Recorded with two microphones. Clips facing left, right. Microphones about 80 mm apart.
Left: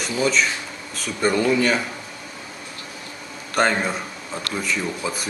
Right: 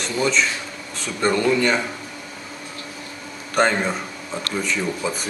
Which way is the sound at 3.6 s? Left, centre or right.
Centre.